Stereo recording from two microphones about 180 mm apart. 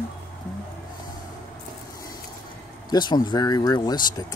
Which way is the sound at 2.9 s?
25° left (ahead or behind).